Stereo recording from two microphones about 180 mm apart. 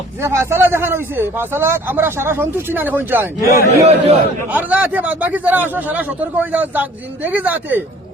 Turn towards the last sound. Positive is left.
turn(degrees=-10)  # may be behind; listen again after turning